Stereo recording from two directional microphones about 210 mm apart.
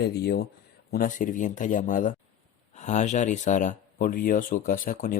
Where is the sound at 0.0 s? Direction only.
50° left (ahead or behind).